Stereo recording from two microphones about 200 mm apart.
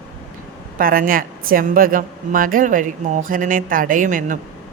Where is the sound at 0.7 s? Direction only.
45° right (ahead or behind).